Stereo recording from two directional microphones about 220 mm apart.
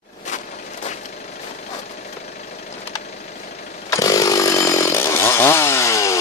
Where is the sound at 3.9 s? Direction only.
15° left (ahead or behind).